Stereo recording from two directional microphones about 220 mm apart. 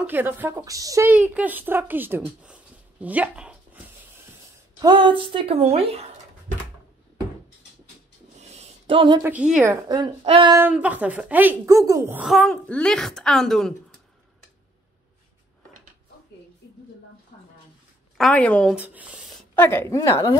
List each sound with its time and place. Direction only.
0.0 s a woman's voice: 10° right (ahead or behind)
4.8 s speech: 20° right (ahead or behind)
8.4 s a sound: 30° right (ahead or behind)
9.2 s a woman's voice: 5° right (ahead or behind)
9.8 s speech: 20° right (ahead or behind)
10.6 s speech: 5° right (ahead or behind)
17.3 s a sound: 30° left (ahead or behind)
18.1 s speech: 5° left (ahead or behind)
18.8 s a sound: 5° right (ahead or behind)
19.5 s a woman's voice: 10° left (ahead or behind)